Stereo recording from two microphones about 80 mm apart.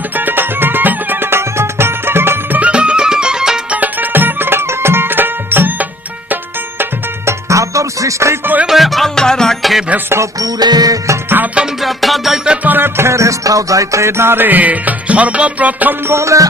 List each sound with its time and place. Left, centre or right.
0.2 s music: right
2.6 s music: centre
3.8 s music: right
7.3 s music: right
8.6 s music: centre
10.4 s music: right
11.5 s music: centre
12.6 s music: right
16.1 s music: right